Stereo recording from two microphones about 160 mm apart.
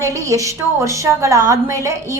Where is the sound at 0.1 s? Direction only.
20° right (ahead or behind).